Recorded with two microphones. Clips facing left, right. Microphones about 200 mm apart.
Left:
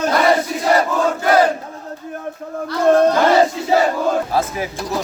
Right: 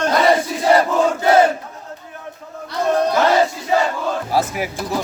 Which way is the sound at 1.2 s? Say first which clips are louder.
Right 1 dB; 25° right (ahead or behind).